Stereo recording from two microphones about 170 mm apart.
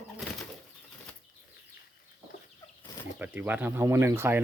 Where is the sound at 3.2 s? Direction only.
10° right (ahead or behind).